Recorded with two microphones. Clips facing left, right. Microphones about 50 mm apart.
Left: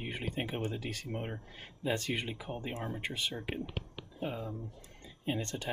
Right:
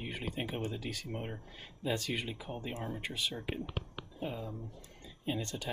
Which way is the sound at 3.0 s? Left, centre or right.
Left.